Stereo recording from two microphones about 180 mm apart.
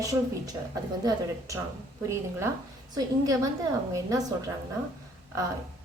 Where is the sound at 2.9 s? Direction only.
20° right (ahead or behind).